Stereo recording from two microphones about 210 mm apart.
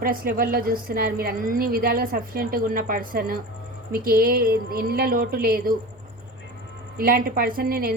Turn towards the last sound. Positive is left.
turn(degrees=-45)  # may be behind; listen again after turning